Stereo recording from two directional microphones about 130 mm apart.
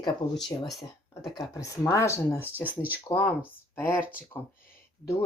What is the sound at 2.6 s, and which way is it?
Speech, 15° right (ahead or behind).